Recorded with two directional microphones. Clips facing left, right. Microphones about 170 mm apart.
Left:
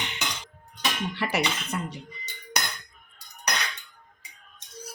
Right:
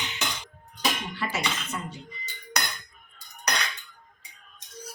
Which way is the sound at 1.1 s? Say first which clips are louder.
Left 3 dB; 65° left (ahead or behind).